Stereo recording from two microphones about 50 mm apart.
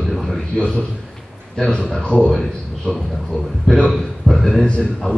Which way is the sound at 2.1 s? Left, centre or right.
Left.